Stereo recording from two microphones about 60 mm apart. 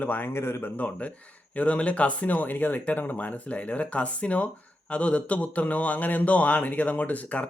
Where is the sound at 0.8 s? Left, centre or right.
Left.